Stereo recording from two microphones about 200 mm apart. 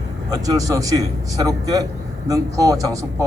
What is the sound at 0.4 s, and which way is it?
A man's voice, 15° right (ahead or behind).